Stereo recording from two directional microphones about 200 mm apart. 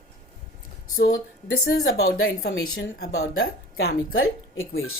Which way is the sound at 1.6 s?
55° left (ahead or behind).